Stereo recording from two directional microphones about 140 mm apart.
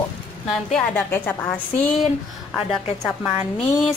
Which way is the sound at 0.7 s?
5° left (ahead or behind).